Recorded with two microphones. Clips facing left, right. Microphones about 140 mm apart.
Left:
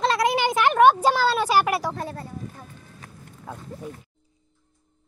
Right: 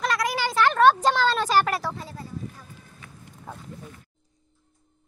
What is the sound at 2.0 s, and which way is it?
Speech, 60° left (ahead or behind).